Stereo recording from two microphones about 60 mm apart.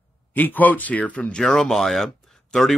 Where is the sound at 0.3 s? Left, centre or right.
Left.